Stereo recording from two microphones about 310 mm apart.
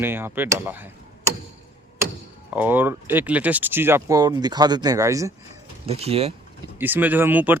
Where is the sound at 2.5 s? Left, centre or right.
Centre.